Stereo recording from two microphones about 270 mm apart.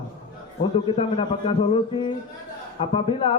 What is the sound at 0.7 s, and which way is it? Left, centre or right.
A man's voice, centre.